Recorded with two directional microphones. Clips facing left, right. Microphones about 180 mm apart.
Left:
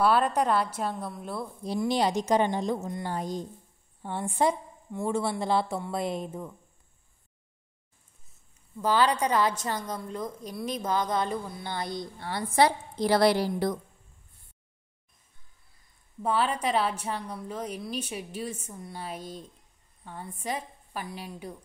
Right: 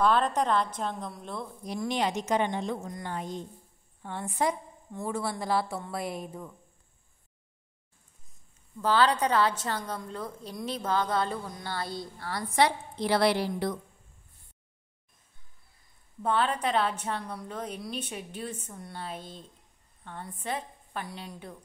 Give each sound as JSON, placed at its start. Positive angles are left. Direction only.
{"t": 0.0, "sound": "a woman's voice", "side_deg": 10}
{"t": 1.6, "sound": "speech", "side_deg": 30}
{"t": 8.8, "sound": "a woman's voice", "side_deg": 10}
{"t": 12.5, "sound": "speech", "side_deg": 35}
{"t": 16.2, "sound": "a woman's voice", "side_deg": 10}